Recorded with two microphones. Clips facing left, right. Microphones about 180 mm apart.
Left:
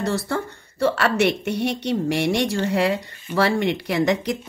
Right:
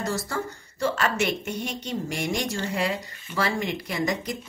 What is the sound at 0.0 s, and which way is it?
A woman's voice, 60° left (ahead or behind).